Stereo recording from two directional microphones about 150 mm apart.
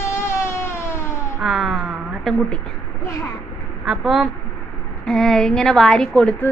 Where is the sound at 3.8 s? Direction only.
Centre (ahead or behind).